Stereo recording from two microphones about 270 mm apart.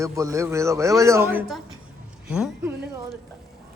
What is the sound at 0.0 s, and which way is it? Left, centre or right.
A man's voice, centre.